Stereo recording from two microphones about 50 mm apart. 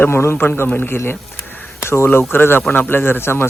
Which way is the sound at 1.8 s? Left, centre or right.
Left.